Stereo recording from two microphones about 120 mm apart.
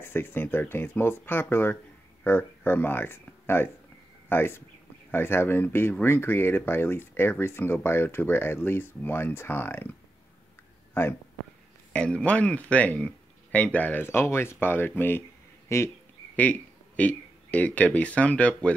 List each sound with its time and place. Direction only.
0.0 s speech: 20° left (ahead or behind)
11.9 s speech: 10° left (ahead or behind)